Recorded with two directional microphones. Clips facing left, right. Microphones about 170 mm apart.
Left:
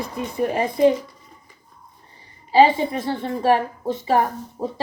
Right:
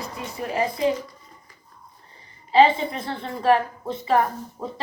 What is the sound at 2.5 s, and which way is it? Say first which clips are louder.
Speech: left 2 dB; 45° left (ahead or behind).